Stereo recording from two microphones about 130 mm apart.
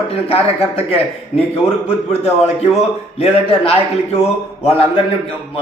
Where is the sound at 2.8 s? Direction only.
50° left (ahead or behind).